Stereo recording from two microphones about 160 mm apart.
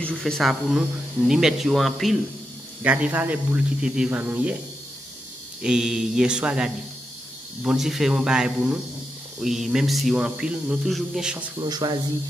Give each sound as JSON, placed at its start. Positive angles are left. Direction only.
{"t": 0.0, "sound": "speech", "side_deg": 5}
{"t": 5.6, "sound": "speech", "side_deg": -5}
{"t": 11.6, "sound": "speech", "side_deg": -25}